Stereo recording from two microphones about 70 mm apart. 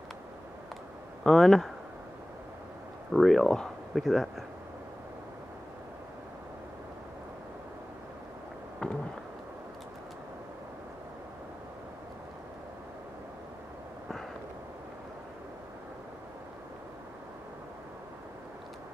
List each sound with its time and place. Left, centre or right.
1.2 s speech: centre
3.1 s speech: centre
8.8 s a sound: centre